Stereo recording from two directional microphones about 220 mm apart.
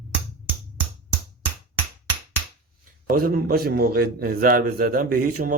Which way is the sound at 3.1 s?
40° right (ahead or behind).